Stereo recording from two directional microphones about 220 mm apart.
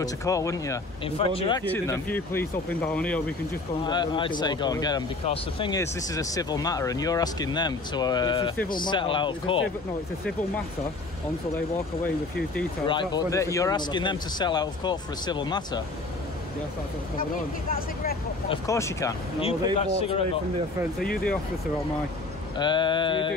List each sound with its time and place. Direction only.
0.0 s speech: 15° left (ahead or behind)
1.0 s speech: 25° left (ahead or behind)
1.6 s speech: 10° left (ahead or behind)
3.8 s speech: 20° left (ahead or behind)
12.8 s speech: 20° left (ahead or behind)
17.2 s speech: 40° left (ahead or behind)
18.5 s speech: 15° left (ahead or behind)
19.4 s speech: 25° left (ahead or behind)
22.6 s speech: 20° left (ahead or behind)